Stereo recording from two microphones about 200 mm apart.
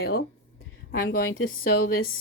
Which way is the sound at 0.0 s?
50° left (ahead or behind).